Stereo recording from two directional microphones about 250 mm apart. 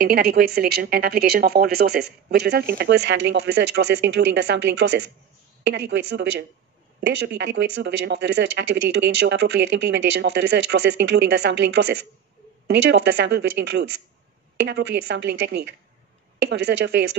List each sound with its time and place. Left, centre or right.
0.0 s speech: right